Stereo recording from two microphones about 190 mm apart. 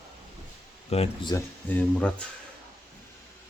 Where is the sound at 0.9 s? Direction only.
30° left (ahead or behind).